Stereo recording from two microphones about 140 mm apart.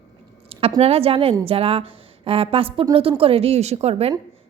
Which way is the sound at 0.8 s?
45° right (ahead or behind).